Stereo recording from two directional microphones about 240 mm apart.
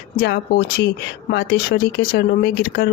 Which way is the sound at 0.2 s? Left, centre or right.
Left.